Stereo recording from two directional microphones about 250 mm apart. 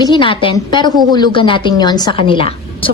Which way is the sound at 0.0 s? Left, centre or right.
Centre.